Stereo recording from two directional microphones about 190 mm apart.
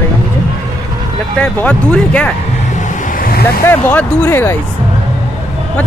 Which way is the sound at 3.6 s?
10° left (ahead or behind).